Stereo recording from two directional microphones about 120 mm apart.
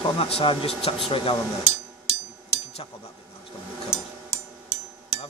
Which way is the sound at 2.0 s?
55° left (ahead or behind).